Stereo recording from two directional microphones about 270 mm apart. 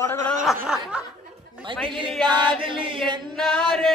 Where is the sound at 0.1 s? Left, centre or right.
Centre.